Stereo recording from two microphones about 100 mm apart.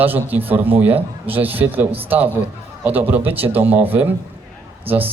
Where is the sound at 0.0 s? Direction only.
20° right (ahead or behind).